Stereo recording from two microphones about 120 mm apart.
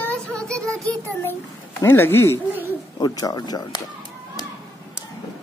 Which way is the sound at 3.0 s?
30° left (ahead or behind).